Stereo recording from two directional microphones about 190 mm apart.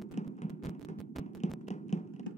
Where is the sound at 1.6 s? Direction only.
35° left (ahead or behind).